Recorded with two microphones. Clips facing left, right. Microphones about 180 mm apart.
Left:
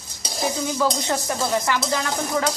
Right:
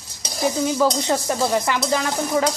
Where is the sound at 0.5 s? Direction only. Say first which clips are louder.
Right 4 dB; 20° right (ahead or behind).